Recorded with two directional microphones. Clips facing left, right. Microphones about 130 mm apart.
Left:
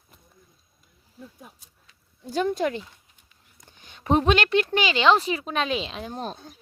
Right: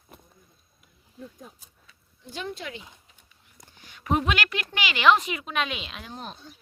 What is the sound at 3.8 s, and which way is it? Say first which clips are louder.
Speech: left 4 dB; 25° left (ahead or behind).